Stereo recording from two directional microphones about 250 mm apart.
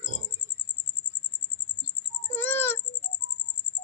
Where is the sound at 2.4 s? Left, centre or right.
Centre.